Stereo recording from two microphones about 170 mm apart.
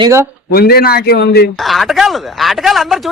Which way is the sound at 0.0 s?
15° right (ahead or behind).